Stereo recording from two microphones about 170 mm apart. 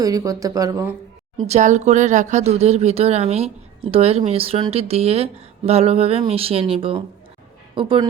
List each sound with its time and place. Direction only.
0.0 s speech: 20° right (ahead or behind)
1.5 s speech: 45° right (ahead or behind)